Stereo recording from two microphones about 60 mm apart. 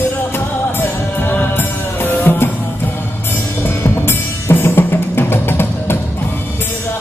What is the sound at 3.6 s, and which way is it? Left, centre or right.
Music, left.